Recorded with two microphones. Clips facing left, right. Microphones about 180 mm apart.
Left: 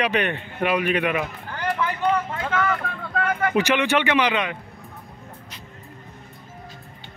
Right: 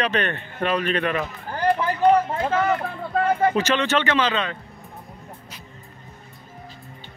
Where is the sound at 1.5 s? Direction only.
35° right (ahead or behind).